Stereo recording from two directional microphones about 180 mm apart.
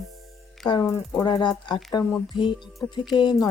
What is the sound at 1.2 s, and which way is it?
Speech, 25° left (ahead or behind).